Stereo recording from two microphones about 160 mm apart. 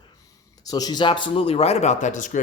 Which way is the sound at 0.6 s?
25° left (ahead or behind).